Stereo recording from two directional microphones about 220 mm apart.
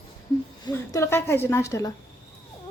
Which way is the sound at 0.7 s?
10° left (ahead or behind).